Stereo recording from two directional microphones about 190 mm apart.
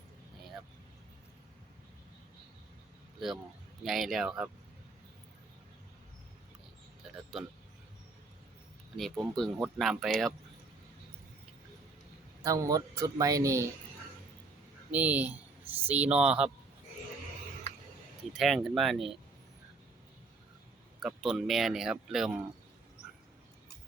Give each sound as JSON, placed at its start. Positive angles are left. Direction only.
{"t": 3.8, "sound": "speech", "side_deg": 0}
{"t": 9.0, "sound": "speech", "side_deg": 0}
{"t": 12.4, "sound": "speech", "side_deg": -15}
{"t": 14.9, "sound": "speech", "side_deg": -10}
{"t": 18.3, "sound": "speech", "side_deg": 0}
{"t": 21.0, "sound": "speech", "side_deg": 0}